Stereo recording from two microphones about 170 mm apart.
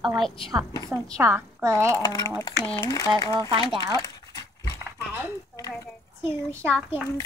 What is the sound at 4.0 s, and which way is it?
Dog, 20° left (ahead or behind).